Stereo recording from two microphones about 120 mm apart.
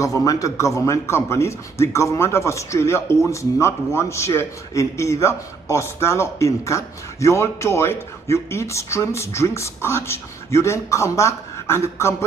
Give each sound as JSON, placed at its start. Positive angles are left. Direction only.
{"t": 0.0, "sound": "a man's voice", "side_deg": 30}